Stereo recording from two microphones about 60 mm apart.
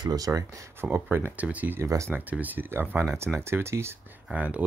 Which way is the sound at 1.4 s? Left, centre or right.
Right.